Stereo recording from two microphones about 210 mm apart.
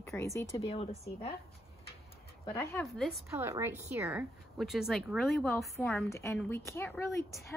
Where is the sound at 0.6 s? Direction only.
30° left (ahead or behind).